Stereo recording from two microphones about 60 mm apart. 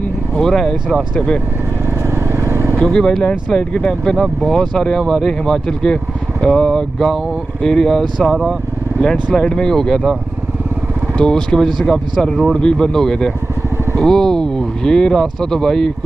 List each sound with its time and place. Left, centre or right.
0.4 s speech: centre
2.0 s vehicle: right
2.8 s speech: centre
9.0 s speech: centre
11.1 s speech: centre